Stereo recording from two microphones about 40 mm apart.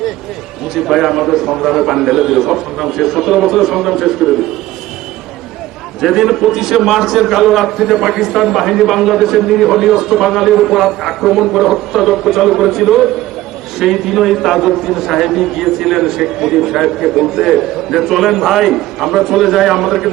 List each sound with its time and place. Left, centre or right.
0.7 s a man's voice: centre
6.0 s a man's voice: centre